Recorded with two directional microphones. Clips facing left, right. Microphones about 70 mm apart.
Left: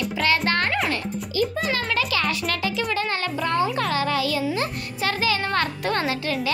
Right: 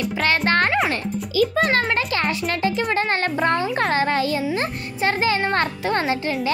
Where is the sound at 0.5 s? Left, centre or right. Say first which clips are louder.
Right 4 dB; right.